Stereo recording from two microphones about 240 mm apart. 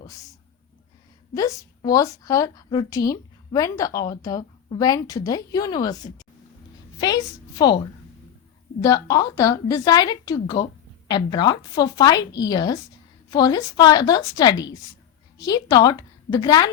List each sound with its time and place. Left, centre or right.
0.0 s a woman's voice: centre
7.0 s a woman's voice: centre